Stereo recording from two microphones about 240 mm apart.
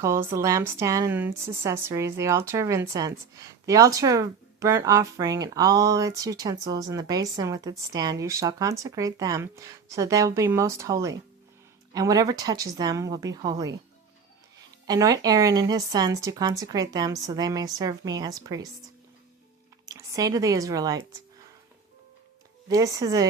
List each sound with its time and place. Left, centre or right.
0.0 s speech: centre
14.8 s speech: centre
19.8 s speech: centre
22.7 s speech: centre